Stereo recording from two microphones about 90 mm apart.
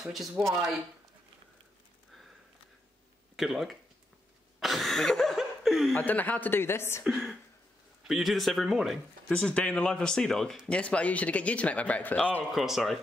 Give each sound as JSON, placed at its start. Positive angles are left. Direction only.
{"t": 0.0, "sound": "speech", "side_deg": -5}
{"t": 3.3, "sound": "speech", "side_deg": 0}
{"t": 4.6, "sound": "cough", "side_deg": 0}
{"t": 5.9, "sound": "speech", "side_deg": 20}
{"t": 7.1, "sound": "speech", "side_deg": 0}
{"t": 9.3, "sound": "speech", "side_deg": 10}
{"t": 12.4, "sound": "speech", "side_deg": -5}